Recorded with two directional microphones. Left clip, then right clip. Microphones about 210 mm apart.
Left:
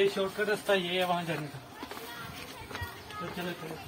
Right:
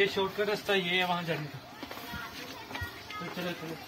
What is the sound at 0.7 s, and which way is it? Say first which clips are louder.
Speech: even; 15° left (ahead or behind).